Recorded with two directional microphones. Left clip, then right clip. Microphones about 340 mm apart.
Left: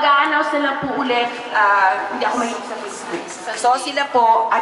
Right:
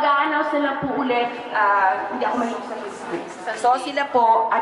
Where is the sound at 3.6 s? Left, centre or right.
Centre.